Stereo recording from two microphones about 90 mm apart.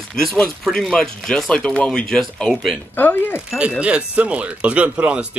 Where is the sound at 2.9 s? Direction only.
20° left (ahead or behind).